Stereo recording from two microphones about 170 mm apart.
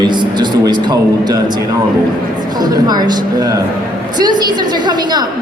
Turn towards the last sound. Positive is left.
turn(degrees=-25)  # may be behind; listen again after turning